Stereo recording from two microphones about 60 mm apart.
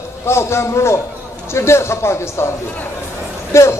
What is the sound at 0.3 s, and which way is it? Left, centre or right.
A man's voice, left.